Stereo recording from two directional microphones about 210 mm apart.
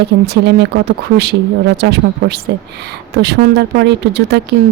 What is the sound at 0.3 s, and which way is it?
A woman's voice, 50° right (ahead or behind).